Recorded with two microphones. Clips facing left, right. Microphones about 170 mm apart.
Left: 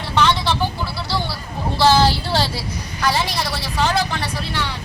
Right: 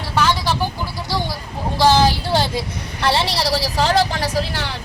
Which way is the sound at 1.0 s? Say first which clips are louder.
Right 3 dB; 15° right (ahead or behind).